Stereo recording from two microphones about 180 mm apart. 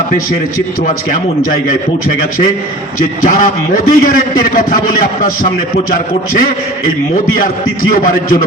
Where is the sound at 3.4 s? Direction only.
50° left (ahead or behind).